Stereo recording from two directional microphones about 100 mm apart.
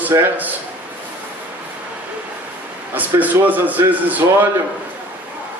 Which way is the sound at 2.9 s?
15° right (ahead or behind).